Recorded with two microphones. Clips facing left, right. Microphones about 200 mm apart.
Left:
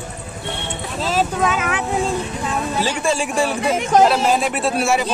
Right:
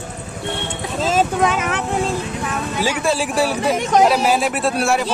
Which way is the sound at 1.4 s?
Centre (ahead or behind).